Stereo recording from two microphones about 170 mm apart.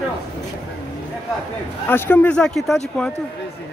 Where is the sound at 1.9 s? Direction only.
15° left (ahead or behind).